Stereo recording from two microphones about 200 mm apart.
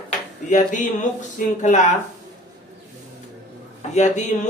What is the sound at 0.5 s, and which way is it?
Speech, 40° left (ahead or behind).